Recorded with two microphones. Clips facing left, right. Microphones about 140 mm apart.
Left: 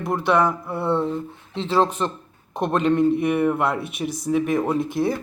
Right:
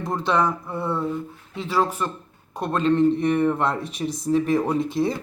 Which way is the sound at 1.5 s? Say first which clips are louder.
Left 3 dB; 25° left (ahead or behind).